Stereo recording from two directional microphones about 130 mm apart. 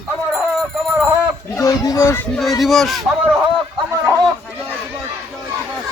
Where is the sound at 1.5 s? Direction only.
25° left (ahead or behind).